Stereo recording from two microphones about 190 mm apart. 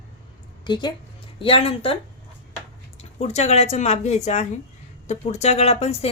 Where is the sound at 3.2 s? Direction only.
35° left (ahead or behind).